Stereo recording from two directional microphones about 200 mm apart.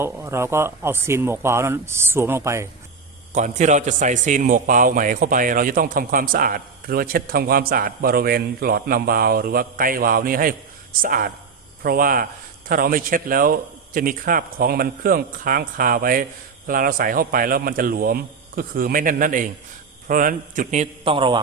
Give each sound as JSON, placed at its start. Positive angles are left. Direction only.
{"t": 0.0, "sound": "speech", "side_deg": -10}
{"t": 3.3, "sound": "a man's voice", "side_deg": -35}